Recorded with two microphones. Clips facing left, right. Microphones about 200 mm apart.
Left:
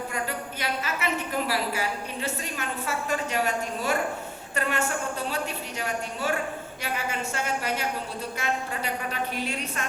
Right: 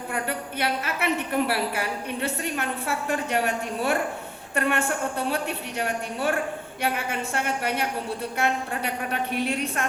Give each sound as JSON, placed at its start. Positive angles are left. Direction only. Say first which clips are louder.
{"t": 0.1, "sound": "a woman's voice", "louder": "right 2 dB", "side_deg": -60}